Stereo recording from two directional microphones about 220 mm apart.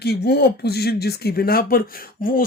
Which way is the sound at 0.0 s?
45° left (ahead or behind).